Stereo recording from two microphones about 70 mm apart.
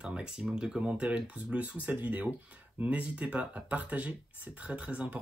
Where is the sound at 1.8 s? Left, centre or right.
Right.